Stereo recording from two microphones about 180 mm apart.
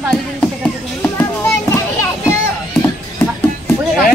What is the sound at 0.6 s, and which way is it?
Children playing, 10° left (ahead or behind).